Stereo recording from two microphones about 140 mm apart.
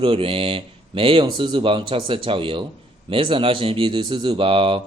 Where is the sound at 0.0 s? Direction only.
40° right (ahead or behind).